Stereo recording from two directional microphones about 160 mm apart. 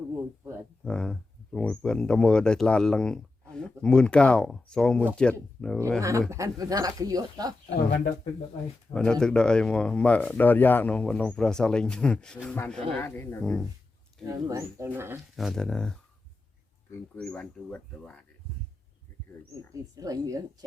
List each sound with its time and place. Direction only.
0.2 s a sound: 15° right (ahead or behind)
0.9 s speech: 5° left (ahead or behind)
6.0 s speech: 20° right (ahead or behind)
8.9 s speech: 5° left (ahead or behind)
13.4 s speech: centre (ahead or behind)
14.3 s speech: 20° right (ahead or behind)
15.4 s speech: centre (ahead or behind)
17.2 s speech: 5° left (ahead or behind)
19.7 s speech: 20° right (ahead or behind)